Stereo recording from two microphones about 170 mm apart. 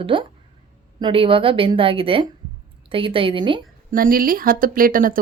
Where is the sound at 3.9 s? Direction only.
55° right (ahead or behind).